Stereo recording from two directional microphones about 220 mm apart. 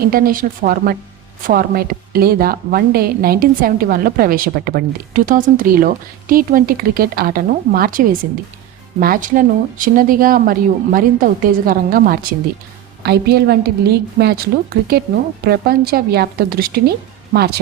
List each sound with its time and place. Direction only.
0.1 s a woman's voice: 40° right (ahead or behind)